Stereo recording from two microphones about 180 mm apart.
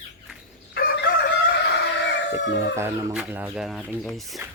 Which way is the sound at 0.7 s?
65° left (ahead or behind).